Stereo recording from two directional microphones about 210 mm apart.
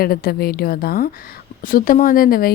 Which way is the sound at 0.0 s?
45° left (ahead or behind).